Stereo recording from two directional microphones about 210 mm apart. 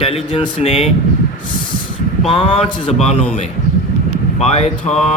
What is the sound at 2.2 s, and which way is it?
Speech, 25° left (ahead or behind).